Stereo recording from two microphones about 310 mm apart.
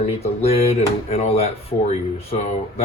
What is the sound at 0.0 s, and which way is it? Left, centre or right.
Speech, centre.